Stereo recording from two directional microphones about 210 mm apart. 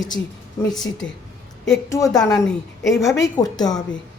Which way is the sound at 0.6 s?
20° left (ahead or behind).